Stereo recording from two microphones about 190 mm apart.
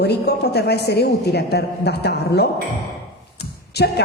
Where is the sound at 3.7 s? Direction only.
60° left (ahead or behind).